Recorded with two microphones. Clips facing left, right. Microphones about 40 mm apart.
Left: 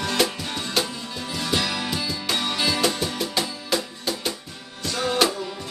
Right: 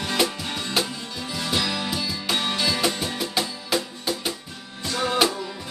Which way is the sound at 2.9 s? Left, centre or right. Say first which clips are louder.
Left 1 dB; right.